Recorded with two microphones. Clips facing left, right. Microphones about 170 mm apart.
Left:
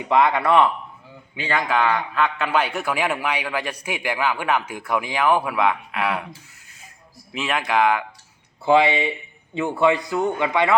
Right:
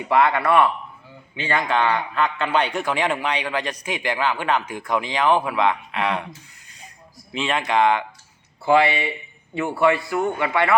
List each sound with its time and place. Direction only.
0.1 s a man's voice: 15° left (ahead or behind)
1.5 s a man's voice: 5° left (ahead or behind)
7.3 s speech: 5° left (ahead or behind)
8.6 s a man's voice: 20° left (ahead or behind)